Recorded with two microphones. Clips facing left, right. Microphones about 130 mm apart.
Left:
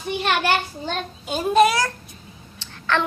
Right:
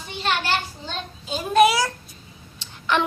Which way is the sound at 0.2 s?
60° left (ahead or behind).